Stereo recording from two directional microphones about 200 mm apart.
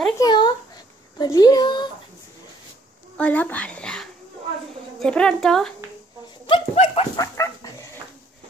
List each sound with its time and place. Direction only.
0.2 s a sound: 20° left (ahead or behind)
1.2 s a woman's voice: 20° left (ahead or behind)
3.2 s a child's voice: 5° left (ahead or behind)
6.4 s dog: 30° left (ahead or behind)
7.2 s dog: 15° left (ahead or behind)